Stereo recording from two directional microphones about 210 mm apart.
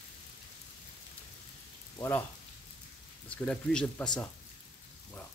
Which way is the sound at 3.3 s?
5° left (ahead or behind).